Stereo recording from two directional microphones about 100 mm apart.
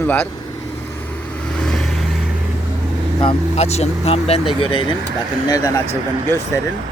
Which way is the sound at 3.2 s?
75° left (ahead or behind).